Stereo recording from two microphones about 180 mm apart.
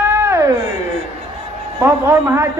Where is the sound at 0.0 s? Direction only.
15° right (ahead or behind).